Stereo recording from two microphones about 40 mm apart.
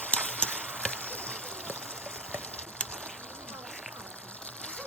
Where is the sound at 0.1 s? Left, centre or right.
Left.